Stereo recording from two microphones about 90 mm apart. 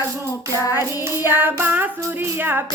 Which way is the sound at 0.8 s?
25° right (ahead or behind).